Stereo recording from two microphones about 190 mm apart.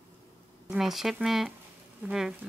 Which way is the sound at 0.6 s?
Centre (ahead or behind).